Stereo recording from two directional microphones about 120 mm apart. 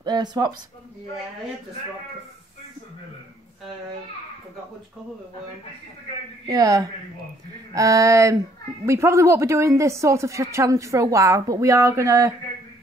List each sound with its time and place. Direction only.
0.0 s speech: 35° right (ahead or behind)
6.4 s a woman's voice: 30° right (ahead or behind)